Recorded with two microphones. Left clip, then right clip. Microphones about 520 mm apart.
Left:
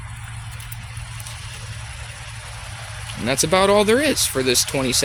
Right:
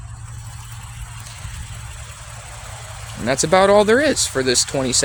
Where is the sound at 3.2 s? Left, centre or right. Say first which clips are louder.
Right 3 dB; left.